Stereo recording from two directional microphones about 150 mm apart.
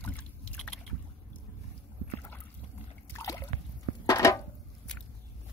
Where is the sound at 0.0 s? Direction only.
10° left (ahead or behind).